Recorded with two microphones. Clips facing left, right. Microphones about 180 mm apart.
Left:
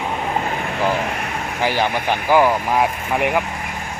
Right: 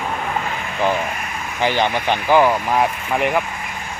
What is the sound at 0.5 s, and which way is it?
Vehicle, 50° left (ahead or behind).